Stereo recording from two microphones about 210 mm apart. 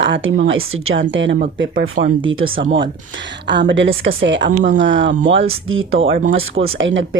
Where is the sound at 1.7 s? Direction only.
40° right (ahead or behind).